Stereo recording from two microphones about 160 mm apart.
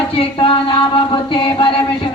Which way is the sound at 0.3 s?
35° left (ahead or behind).